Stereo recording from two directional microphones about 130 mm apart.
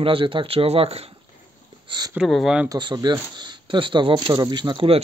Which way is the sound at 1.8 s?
35° right (ahead or behind).